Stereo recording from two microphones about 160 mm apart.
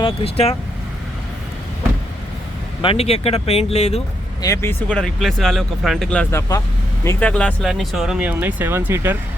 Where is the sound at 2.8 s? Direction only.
40° left (ahead or behind).